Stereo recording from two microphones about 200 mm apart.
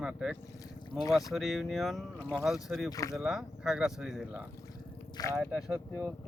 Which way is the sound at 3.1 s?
5° right (ahead or behind).